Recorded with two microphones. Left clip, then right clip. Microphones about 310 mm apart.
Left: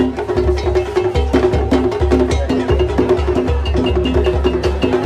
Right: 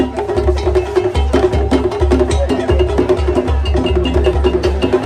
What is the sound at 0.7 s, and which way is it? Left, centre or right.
Music, right.